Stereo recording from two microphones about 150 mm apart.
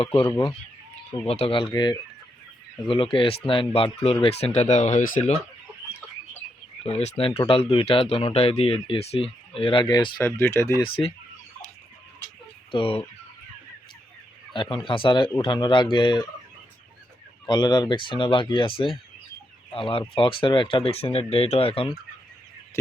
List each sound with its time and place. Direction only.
0.0 s speech: 35° left (ahead or behind)
1.3 s speech: 40° left (ahead or behind); by 5.3 s 60° left (ahead or behind)
6.8 s speech: 45° left (ahead or behind)
10.2 s speech: 15° left (ahead or behind)
12.7 s speech: 40° left (ahead or behind)
14.5 s speech: 35° left (ahead or behind)
17.4 s speech: 30° left (ahead or behind)
19.7 s speech: 35° left (ahead or behind)